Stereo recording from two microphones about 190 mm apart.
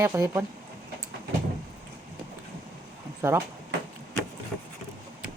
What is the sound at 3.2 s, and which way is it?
Speech, 15° right (ahead or behind).